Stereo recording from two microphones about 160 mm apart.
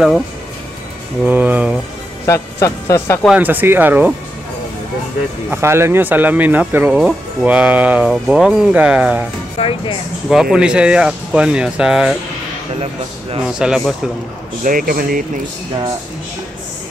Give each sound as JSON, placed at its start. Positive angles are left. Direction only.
{"t": 1.2, "sound": "speech", "side_deg": -10}
{"t": 2.2, "sound": "speech", "side_deg": 20}
{"t": 3.3, "sound": "speech", "side_deg": -10}
{"t": 5.5, "sound": "speech", "side_deg": -15}
{"t": 9.6, "sound": "speech", "side_deg": 35}
{"t": 10.3, "sound": "speech", "side_deg": -5}
{"t": 13.4, "sound": "speech", "side_deg": -5}
{"t": 14.6, "sound": "speech", "side_deg": -60}